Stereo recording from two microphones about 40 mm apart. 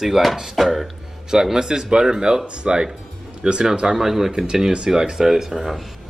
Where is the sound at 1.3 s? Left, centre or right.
Centre.